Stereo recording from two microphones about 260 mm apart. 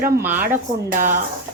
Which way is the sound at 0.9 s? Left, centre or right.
Right.